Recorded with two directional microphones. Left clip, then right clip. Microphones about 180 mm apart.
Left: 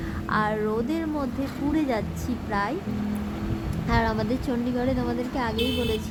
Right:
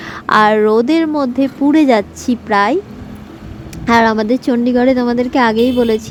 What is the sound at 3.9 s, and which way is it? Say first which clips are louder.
A woman's voice: right 14 dB; 40° right (ahead or behind).